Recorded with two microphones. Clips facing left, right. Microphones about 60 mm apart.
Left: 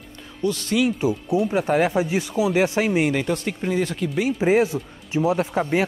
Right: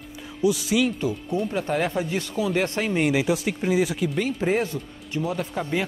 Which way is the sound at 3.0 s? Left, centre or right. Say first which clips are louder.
Right 1 dB; centre.